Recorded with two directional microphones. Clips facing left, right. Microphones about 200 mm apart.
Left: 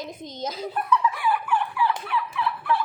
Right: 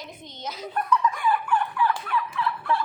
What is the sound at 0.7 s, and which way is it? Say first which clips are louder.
Fowl: right 1 dB; 5° left (ahead or behind).